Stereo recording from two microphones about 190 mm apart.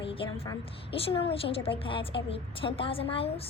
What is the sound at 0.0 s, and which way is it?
A woman's voice, 30° left (ahead or behind).